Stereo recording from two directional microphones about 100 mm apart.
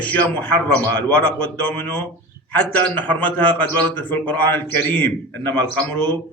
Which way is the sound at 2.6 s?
20° left (ahead or behind).